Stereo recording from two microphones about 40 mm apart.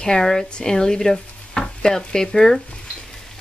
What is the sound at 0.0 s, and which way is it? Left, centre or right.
Speech, centre.